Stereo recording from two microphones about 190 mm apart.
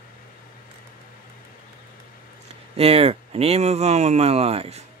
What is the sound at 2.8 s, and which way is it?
Speech, 30° right (ahead or behind).